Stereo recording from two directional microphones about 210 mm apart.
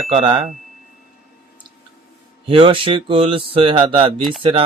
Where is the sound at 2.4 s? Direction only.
25° right (ahead or behind).